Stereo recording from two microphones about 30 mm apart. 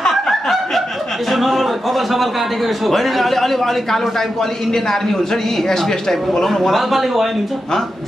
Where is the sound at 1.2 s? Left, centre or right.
Centre.